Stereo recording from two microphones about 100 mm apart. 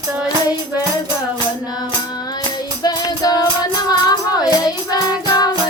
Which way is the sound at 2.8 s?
40° left (ahead or behind).